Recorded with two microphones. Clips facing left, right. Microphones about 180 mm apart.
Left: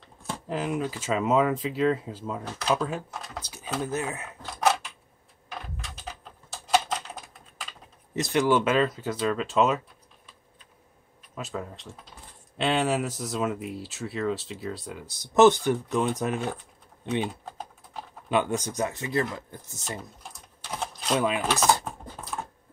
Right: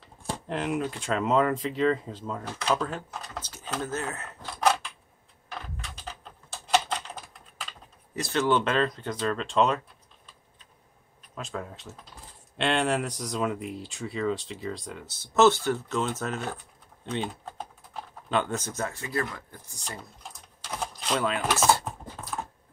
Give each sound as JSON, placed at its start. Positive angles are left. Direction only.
{"t": 0.0, "sound": "speech", "side_deg": 0}
{"t": 8.2, "sound": "speech", "side_deg": 15}
{"t": 11.3, "sound": "speech", "side_deg": 5}
{"t": 18.3, "sound": "speech", "side_deg": 10}
{"t": 20.8, "sound": "typewriter", "side_deg": 0}